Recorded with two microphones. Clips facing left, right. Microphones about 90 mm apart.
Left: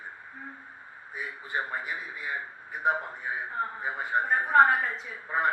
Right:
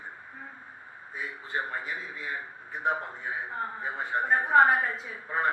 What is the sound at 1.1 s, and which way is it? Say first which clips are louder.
A man's voice: even; 15° left (ahead or behind).